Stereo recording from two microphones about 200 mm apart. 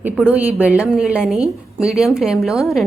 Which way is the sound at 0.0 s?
5° right (ahead or behind).